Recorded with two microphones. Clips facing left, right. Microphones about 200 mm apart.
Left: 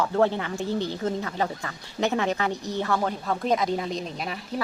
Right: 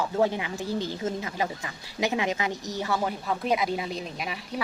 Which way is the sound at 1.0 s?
20° right (ahead or behind).